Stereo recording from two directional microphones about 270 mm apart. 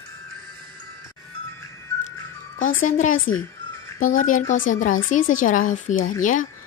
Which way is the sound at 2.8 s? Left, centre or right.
Left.